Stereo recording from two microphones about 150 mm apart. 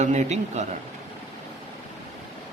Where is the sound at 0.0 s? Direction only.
50° right (ahead or behind).